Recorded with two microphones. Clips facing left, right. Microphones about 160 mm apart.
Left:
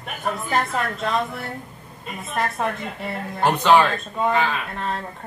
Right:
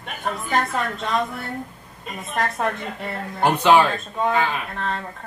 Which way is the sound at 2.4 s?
Centre (ahead or behind).